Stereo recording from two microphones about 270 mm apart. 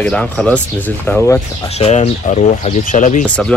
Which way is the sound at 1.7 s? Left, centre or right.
Left.